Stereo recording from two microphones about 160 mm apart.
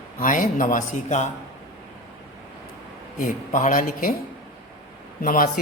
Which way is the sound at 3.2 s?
55° left (ahead or behind).